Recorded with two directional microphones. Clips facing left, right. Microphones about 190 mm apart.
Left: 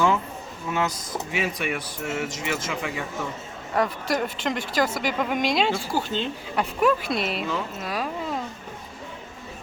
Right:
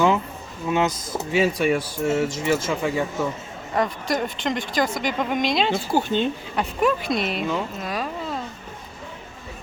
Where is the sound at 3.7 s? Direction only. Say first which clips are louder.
Right 1 dB; 5° left (ahead or behind).